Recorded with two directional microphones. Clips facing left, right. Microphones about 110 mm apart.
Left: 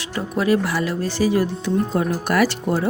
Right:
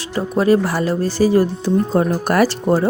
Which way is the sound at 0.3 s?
35° right (ahead or behind).